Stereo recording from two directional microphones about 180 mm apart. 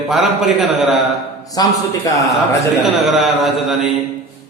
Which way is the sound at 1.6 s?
20° left (ahead or behind).